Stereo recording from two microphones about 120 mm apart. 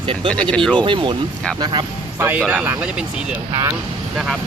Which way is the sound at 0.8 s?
45° right (ahead or behind).